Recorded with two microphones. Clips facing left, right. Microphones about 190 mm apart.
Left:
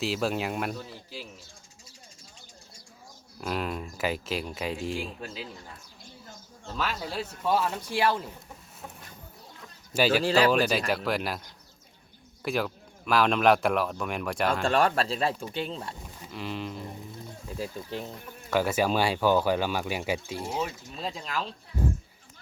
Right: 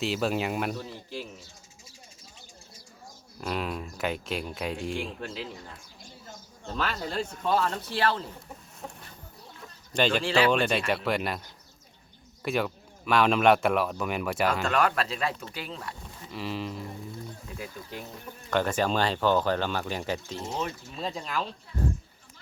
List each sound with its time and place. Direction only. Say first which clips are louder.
0.0 s speech: right 1 dB; centre (ahead or behind)
3.4 s speech: even; centre (ahead or behind)
6.7 s speech: right 1 dB; 5° left (ahead or behind)
9.9 s speech: left 2 dB; 5° left (ahead or behind)
10.2 s speech: left 1 dB; 40° left (ahead or behind)
10.5 s speech: left 1 dB; 5° left (ahead or behind)
14.6 s speech: left 2 dB; 30° left (ahead or behind)
16.3 s speech: right 1 dB; centre (ahead or behind)
18.5 s speech: left 1 dB; 10° left (ahead or behind)